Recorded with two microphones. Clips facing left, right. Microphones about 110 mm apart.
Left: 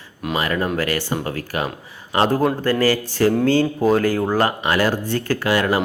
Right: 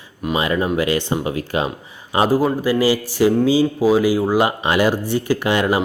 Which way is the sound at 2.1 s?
5° right (ahead or behind).